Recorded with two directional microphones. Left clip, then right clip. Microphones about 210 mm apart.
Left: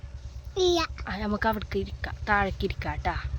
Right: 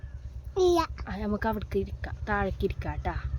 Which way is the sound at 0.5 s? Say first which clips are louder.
Even; 35° right (ahead or behind).